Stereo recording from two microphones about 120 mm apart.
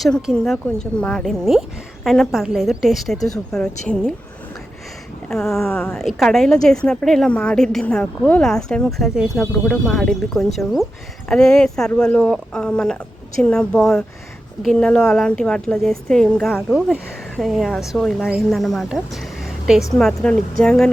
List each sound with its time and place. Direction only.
0.0 s a woman's voice: centre (ahead or behind)
5.3 s a woman's voice: 5° left (ahead or behind)
5.7 s speech: 15° left (ahead or behind)
6.0 s a woman's voice: centre (ahead or behind)